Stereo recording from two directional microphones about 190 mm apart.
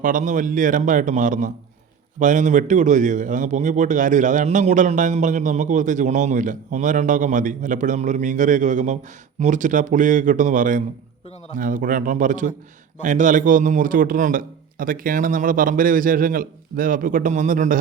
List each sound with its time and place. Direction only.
0.0 s a man's voice: 45° right (ahead or behind)